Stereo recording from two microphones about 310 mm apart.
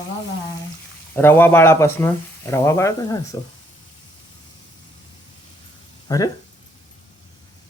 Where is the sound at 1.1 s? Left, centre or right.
Centre.